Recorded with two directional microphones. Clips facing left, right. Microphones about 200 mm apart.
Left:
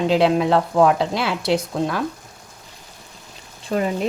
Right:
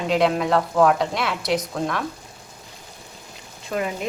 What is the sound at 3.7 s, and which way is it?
Speech, 30° left (ahead or behind).